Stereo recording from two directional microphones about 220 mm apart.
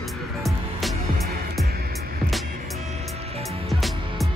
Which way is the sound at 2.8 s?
30° right (ahead or behind).